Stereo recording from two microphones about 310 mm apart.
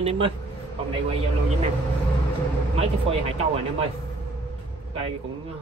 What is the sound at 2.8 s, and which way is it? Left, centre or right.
Speech, centre.